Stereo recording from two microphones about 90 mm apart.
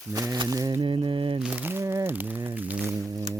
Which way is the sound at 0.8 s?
70° right (ahead or behind).